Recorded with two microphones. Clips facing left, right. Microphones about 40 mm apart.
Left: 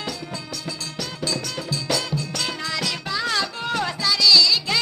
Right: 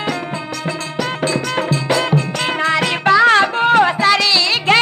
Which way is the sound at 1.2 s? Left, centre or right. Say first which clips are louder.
Right 8 dB; right.